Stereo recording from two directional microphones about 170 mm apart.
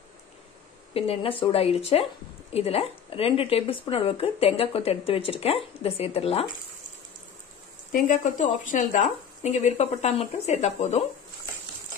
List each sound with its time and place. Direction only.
0.9 s a woman's voice: 35° left (ahead or behind)
7.9 s a woman's voice: 50° left (ahead or behind)